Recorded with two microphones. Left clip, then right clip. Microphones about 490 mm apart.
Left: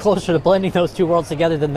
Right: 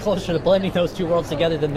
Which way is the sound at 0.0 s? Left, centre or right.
Left.